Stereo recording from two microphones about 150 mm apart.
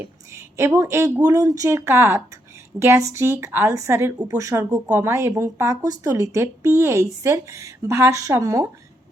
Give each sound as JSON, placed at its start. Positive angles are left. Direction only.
{"t": 0.0, "sound": "speech", "side_deg": -15}